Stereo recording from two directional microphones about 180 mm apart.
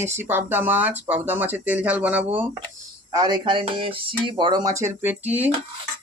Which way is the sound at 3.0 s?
20° right (ahead or behind).